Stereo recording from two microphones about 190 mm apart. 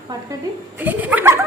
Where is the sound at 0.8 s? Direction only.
10° right (ahead or behind).